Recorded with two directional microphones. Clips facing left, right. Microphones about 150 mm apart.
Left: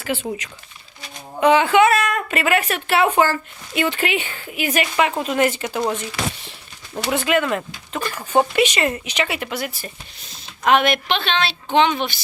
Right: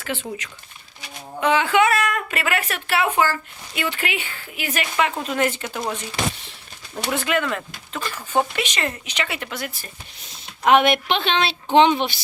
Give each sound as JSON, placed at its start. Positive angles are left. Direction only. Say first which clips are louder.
{"t": 0.0, "sound": "a woman's voice", "louder": "left 4 dB", "side_deg": 15}
{"t": 3.0, "sound": "a woman's voice", "louder": "left 3 dB", "side_deg": 30}
{"t": 6.9, "sound": "speech", "louder": "left 3 dB", "side_deg": 10}
{"t": 10.6, "sound": "a woman's voice", "louder": "right 1 dB", "side_deg": -15}
{"t": 11.7, "sound": "a woman's voice", "louder": "right 2 dB", "side_deg": -30}